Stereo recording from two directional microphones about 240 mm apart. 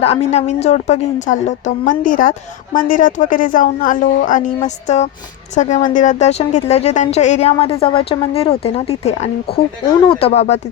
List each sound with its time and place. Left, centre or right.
0.0 s a woman's voice: left